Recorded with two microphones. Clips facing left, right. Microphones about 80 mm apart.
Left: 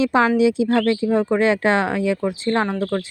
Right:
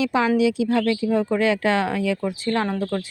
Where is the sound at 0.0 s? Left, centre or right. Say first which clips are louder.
Left 3 dB; left.